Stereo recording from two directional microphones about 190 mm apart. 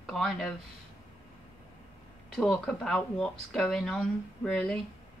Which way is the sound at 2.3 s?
5° left (ahead or behind).